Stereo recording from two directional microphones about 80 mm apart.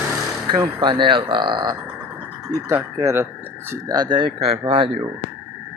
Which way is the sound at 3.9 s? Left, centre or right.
Right.